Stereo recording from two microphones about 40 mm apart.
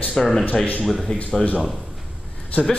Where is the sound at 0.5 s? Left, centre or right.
Left.